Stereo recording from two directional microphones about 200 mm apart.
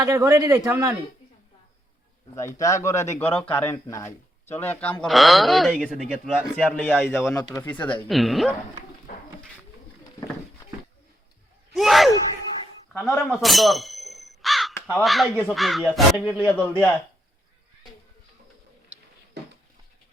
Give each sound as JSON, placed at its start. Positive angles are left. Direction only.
{"t": 0.0, "sound": "a man's voice", "side_deg": -15}
{"t": 2.3, "sound": "speech", "side_deg": 15}
{"t": 11.7, "sound": "speech", "side_deg": 0}
{"t": 13.0, "sound": "crow", "side_deg": 0}
{"t": 14.9, "sound": "speech", "side_deg": 0}
{"t": 16.6, "sound": "speech", "side_deg": 10}
{"t": 18.9, "sound": "a sound", "side_deg": -5}